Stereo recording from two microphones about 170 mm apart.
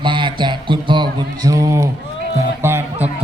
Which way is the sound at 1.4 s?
20° right (ahead or behind).